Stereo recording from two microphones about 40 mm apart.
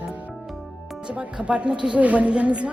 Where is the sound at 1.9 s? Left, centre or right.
Right.